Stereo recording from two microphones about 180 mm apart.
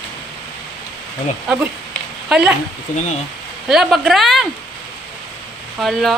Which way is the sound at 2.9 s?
45° left (ahead or behind).